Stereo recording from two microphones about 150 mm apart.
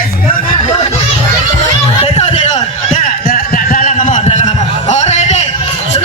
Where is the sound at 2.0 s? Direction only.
45° left (ahead or behind).